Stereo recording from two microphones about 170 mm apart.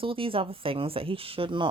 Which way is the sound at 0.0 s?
30° right (ahead or behind).